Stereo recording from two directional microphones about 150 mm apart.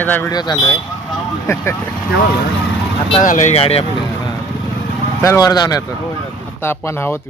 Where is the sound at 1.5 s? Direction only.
20° left (ahead or behind).